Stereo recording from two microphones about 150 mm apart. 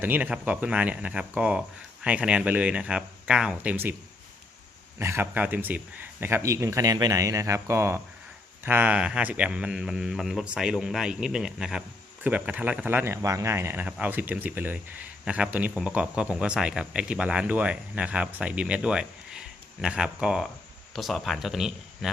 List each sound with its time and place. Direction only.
0.0 s speech: 10° right (ahead or behind)
4.9 s a man's voice: 15° right (ahead or behind); by 22.1 s centre (ahead or behind)